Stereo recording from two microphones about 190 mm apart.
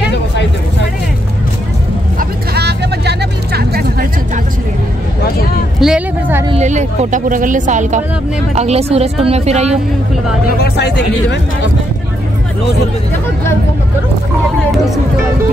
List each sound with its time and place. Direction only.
2.1 s vehicle: 60° right (ahead or behind)
5.8 s a sound: 5° right (ahead or behind)
6.5 s speech: 35° right (ahead or behind)
10.6 s speech: 60° left (ahead or behind)